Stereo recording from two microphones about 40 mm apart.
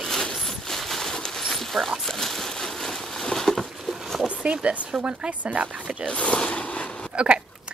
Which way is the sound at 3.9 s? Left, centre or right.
Centre.